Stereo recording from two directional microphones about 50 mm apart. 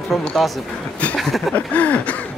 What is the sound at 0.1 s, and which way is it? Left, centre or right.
Speech, centre.